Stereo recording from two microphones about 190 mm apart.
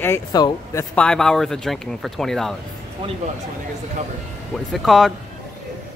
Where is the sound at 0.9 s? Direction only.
5° left (ahead or behind).